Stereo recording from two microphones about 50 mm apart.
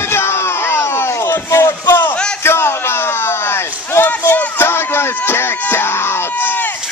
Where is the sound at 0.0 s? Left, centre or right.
Left.